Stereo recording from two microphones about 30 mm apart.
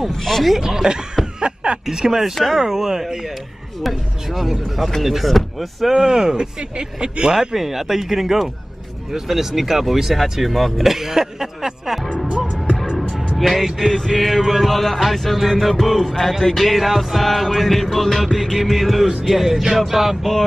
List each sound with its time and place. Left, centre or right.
0.1 s speech: centre
0.6 s speech: centre
1.4 s snicker: right
1.9 s speech: centre
2.1 s speech: centre
3.8 s music: centre
5.0 s speech: centre
5.3 s music: centre
5.9 s speech: right
7.3 s speech: centre
12.3 s music: right
13.4 s speech: centre
14.1 s music: centre
19.2 s speech: centre